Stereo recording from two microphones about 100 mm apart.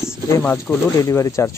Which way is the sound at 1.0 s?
30° left (ahead or behind).